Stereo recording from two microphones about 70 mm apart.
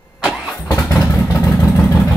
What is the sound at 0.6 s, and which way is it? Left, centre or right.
Vehicle, left.